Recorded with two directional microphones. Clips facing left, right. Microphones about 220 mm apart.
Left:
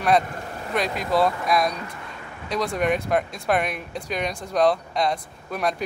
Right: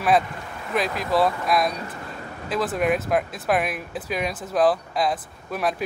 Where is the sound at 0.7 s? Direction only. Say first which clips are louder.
Even; centre (ahead or behind).